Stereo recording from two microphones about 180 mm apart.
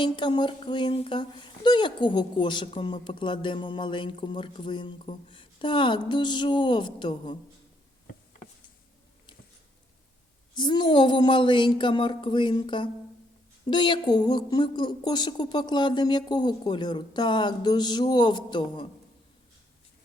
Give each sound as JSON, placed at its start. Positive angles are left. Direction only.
{"t": 0.0, "sound": "speech", "side_deg": 25}
{"t": 10.5, "sound": "speech", "side_deg": 25}